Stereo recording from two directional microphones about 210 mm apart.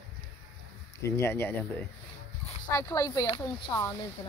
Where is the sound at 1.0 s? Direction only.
15° left (ahead or behind).